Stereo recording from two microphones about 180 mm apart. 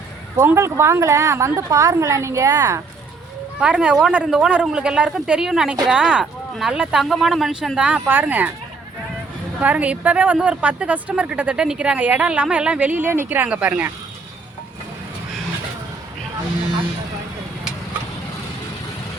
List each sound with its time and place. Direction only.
0.3 s a woman's voice: 15° right (ahead or behind)
3.6 s speech: 5° right (ahead or behind)
9.6 s a woman's voice: 10° right (ahead or behind)